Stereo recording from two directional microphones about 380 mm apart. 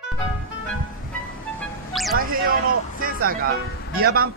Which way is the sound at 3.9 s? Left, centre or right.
Right.